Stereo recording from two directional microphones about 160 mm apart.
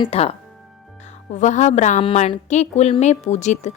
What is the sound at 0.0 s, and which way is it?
Speech, 40° left (ahead or behind).